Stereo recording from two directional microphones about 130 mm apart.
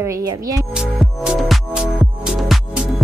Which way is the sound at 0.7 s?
5° right (ahead or behind).